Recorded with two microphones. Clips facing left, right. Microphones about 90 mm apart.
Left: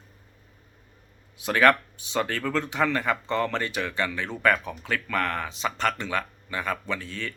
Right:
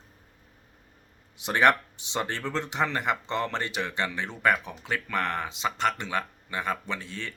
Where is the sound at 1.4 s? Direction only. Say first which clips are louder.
Left 2 dB; 25° right (ahead or behind).